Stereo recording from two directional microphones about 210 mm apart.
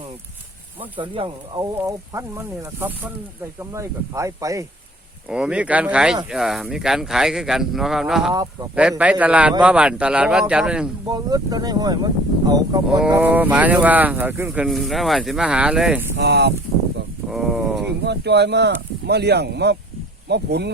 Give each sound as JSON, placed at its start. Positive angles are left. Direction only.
{"t": 0.9, "sound": "speech", "side_deg": -25}
{"t": 5.3, "sound": "a man's voice", "side_deg": -5}
{"t": 11.1, "sound": "speech", "side_deg": -20}
{"t": 16.1, "sound": "speech", "side_deg": -55}
{"t": 17.2, "sound": "a sound", "side_deg": 0}
{"t": 18.0, "sound": "speech", "side_deg": -55}